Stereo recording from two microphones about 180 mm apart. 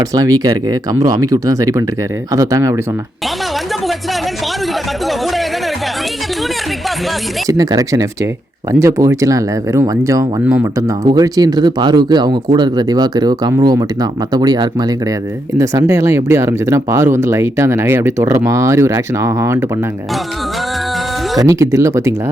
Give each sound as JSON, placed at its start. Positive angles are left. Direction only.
{"t": 0.0, "sound": "speech", "side_deg": -20}
{"t": 5.0, "sound": "speech", "side_deg": 0}
{"t": 7.4, "sound": "speech", "side_deg": -20}
{"t": 21.3, "sound": "speech", "side_deg": -15}